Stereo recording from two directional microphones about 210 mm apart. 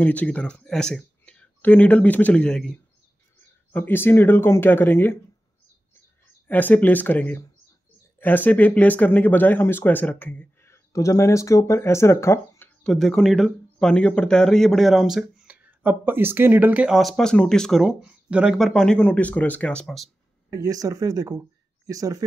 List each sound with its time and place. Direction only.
0.0 s speech: 5° left (ahead or behind)
6.4 s speech: 10° left (ahead or behind)
20.5 s speech: 15° right (ahead or behind)